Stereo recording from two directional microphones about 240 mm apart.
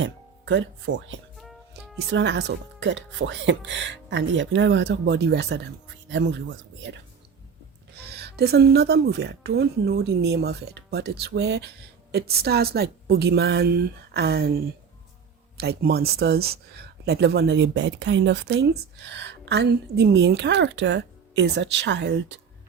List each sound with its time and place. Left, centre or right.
0.0 s speech: right
1.4 s music: centre
2.0 s speech: right
8.1 s a woman's voice: right